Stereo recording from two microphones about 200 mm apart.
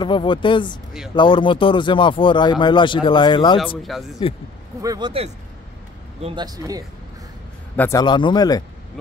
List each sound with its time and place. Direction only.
0.0 s speech: 25° left (ahead or behind)
3.5 s speech: centre (ahead or behind)
4.2 s speech: 25° left (ahead or behind)
4.8 s speech: 20° right (ahead or behind)
7.7 s a man's voice: 10° left (ahead or behind)
8.0 s speech: 20° left (ahead or behind)